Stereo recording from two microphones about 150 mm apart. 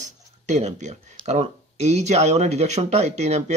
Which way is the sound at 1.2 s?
45° right (ahead or behind).